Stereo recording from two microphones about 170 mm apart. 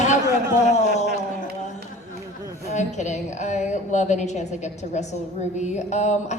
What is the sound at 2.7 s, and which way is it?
A woman's voice, 45° left (ahead or behind).